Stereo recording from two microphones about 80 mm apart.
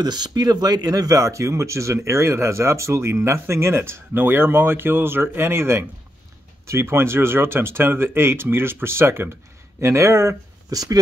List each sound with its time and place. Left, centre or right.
0.0 s speech: right
10.7 s speech: right